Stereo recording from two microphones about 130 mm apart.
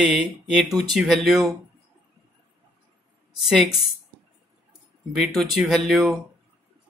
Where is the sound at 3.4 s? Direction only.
Centre (ahead or behind).